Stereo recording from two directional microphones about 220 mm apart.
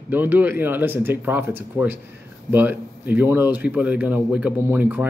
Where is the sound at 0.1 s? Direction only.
10° right (ahead or behind).